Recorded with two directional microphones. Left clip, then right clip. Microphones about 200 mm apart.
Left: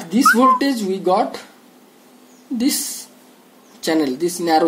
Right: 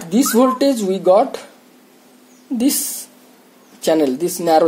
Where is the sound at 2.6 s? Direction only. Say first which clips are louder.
Right 2 dB; 35° right (ahead or behind).